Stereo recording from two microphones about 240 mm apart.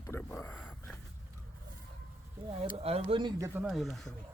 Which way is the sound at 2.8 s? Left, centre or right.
Right.